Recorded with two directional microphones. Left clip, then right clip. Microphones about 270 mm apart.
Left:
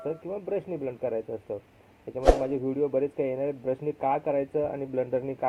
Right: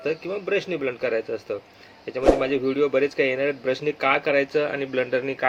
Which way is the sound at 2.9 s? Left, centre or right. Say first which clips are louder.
Right 6 dB; right.